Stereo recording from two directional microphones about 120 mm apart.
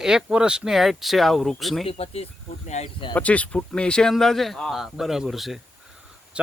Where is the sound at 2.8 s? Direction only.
75° left (ahead or behind).